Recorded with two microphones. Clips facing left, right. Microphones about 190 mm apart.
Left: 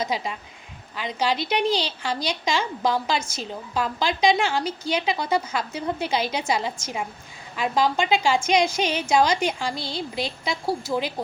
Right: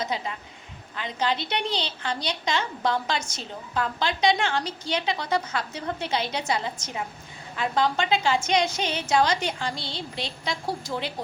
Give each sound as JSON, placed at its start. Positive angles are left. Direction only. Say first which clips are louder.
{"t": 0.0, "sound": "a woman's voice", "louder": "left 3 dB", "side_deg": 10}